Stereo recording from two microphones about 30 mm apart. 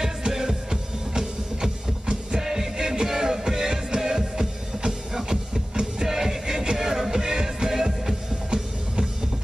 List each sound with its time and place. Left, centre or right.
0.0 s music: centre